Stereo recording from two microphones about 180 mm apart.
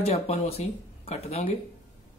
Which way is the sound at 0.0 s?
35° left (ahead or behind).